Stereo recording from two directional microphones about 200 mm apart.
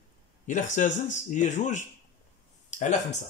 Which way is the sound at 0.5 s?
40° left (ahead or behind).